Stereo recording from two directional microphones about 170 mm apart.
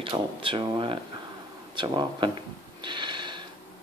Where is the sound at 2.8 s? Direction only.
25° right (ahead or behind).